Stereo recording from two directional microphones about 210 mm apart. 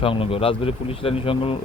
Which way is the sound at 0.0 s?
25° left (ahead or behind).